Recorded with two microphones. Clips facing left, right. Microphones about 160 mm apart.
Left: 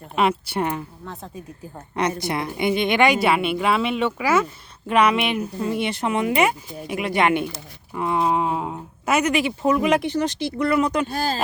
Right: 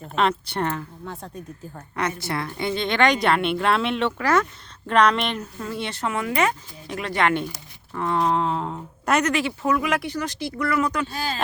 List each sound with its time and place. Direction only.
0.0 s speech: 10° left (ahead or behind)
1.0 s speech: centre (ahead or behind)
1.7 s speech: 15° left (ahead or behind)
11.1 s speech: 45° left (ahead or behind)